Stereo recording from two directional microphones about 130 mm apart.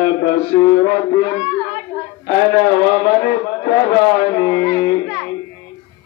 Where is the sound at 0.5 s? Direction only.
30° left (ahead or behind).